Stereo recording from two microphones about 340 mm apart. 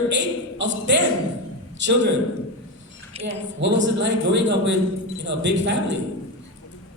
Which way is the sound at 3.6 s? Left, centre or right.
Right.